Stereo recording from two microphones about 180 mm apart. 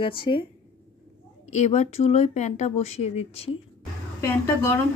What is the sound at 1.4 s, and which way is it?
Speech, 40° left (ahead or behind).